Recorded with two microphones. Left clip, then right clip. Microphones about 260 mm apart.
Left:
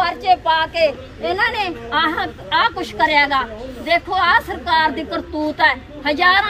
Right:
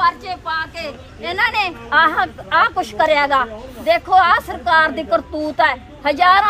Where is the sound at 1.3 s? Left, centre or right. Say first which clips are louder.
Right 2 dB; centre.